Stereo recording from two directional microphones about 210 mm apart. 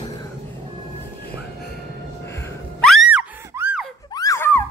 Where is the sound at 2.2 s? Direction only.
15° left (ahead or behind).